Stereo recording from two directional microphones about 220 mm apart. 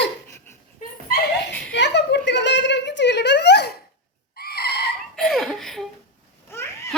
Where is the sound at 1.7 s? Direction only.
50° left (ahead or behind).